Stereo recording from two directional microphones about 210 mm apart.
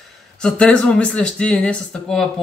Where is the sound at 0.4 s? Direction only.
5° left (ahead or behind).